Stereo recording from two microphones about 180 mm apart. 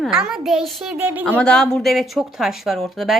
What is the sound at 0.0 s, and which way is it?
A woman's voice, 5° right (ahead or behind).